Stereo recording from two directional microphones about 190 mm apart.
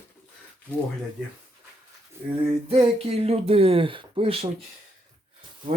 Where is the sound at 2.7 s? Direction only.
30° right (ahead or behind).